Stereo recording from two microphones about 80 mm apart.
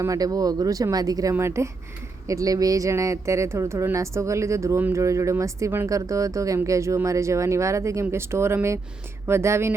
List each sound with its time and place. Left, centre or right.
0.0 s speech: right